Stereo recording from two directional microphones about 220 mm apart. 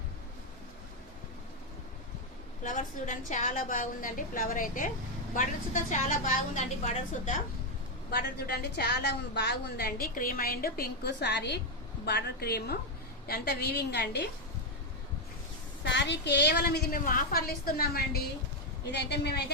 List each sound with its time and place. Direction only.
2.6 s a woman's voice: 35° left (ahead or behind)
8.1 s a woman's voice: 45° left (ahead or behind)
15.8 s a woman's voice: 55° left (ahead or behind)